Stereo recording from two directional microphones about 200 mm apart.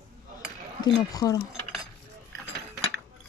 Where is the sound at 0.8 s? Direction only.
15° left (ahead or behind).